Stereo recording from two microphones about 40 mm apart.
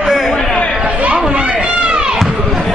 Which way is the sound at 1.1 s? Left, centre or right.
Right.